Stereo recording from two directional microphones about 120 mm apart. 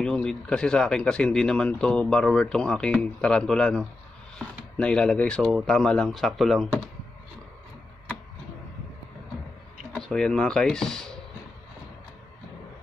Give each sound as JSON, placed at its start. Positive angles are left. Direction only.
{"t": 0.0, "sound": "speech", "side_deg": 5}
{"t": 9.9, "sound": "speech", "side_deg": 5}